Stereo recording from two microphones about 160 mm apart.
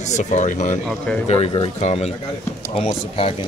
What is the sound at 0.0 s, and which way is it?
Speech, 45° left (ahead or behind).